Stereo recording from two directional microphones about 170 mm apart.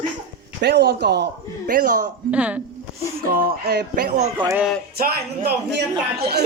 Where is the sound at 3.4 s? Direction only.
60° right (ahead or behind).